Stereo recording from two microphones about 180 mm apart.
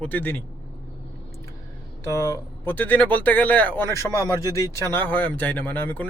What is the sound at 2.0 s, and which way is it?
Speech, 15° left (ahead or behind).